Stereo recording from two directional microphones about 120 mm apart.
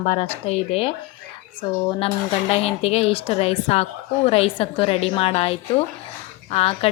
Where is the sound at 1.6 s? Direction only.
40° left (ahead or behind).